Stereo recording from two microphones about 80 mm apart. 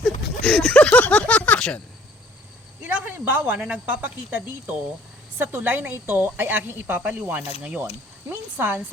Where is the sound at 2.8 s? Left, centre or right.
Right.